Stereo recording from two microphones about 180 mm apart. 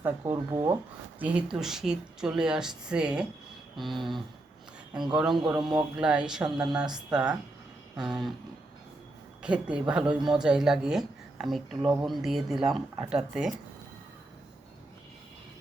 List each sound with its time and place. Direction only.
0.0 s speech: 15° right (ahead or behind)
9.4 s speech: 5° right (ahead or behind)